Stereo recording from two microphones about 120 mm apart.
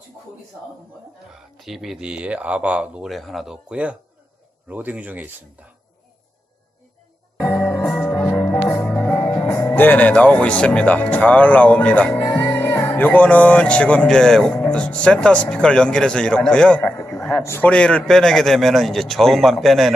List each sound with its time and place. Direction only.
1.5 s speech: centre (ahead or behind)
7.3 s music: 20° left (ahead or behind)
8.6 s speech: 15° left (ahead or behind)
16.8 s a sound: 20° left (ahead or behind)
17.2 s a sound: 5° left (ahead or behind)
17.4 s a man's voice: 20° left (ahead or behind)
17.7 s a man's voice: 10° left (ahead or behind)